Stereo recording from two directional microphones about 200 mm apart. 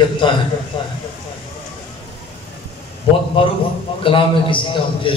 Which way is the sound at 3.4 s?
25° left (ahead or behind).